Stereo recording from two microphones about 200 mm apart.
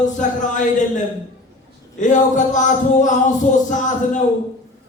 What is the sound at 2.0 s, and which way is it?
Speech, 40° left (ahead or behind).